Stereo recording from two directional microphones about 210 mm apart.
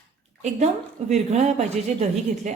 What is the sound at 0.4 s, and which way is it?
Speech, 35° right (ahead or behind).